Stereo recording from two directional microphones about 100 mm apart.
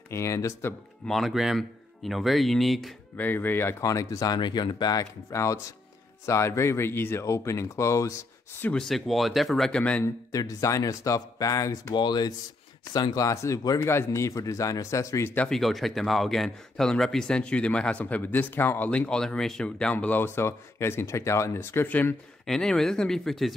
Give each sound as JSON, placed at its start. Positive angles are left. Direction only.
{"t": 0.1, "sound": "speech", "side_deg": 30}
{"t": 1.0, "sound": "speech", "side_deg": 0}
{"t": 3.2, "sound": "speech", "side_deg": 20}
{"t": 3.8, "sound": "speech", "side_deg": 35}
{"t": 5.3, "sound": "speech", "side_deg": 30}
{"t": 8.6, "sound": "speech", "side_deg": 5}
{"t": 10.0, "sound": "speech", "side_deg": 35}
{"t": 11.9, "sound": "speech", "side_deg": 50}
{"t": 15.3, "sound": "speech", "side_deg": 5}
{"t": 22.5, "sound": "speech", "side_deg": 5}